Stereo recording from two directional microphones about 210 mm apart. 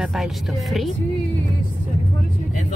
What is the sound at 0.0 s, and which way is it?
Speech, centre (ahead or behind).